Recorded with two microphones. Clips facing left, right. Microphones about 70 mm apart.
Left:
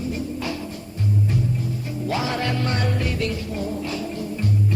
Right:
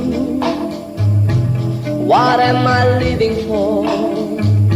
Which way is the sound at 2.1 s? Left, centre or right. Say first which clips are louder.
Right 14 dB; right.